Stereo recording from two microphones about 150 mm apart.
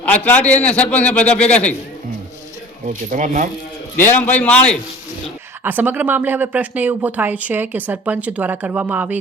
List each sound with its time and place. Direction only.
0.0 s a man's voice: 10° left (ahead or behind)
2.8 s speech: 60° right (ahead or behind)
3.9 s a man's voice: 15° left (ahead or behind)
5.6 s speech: 10° right (ahead or behind)